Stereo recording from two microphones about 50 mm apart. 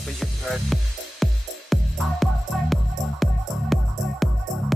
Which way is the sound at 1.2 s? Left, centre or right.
Centre.